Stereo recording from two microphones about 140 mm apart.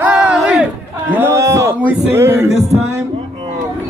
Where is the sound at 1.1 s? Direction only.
20° right (ahead or behind).